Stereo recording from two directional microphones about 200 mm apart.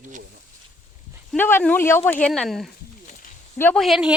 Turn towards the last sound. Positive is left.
turn(degrees=0)  # may be behind; listen again after turning